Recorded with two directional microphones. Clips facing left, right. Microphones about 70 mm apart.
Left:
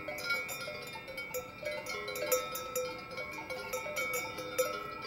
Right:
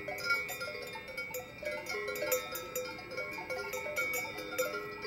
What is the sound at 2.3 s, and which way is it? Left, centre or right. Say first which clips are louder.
Cowbell: left 2 dB; centre.